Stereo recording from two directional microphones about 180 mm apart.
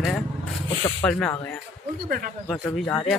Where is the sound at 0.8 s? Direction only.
15° left (ahead or behind).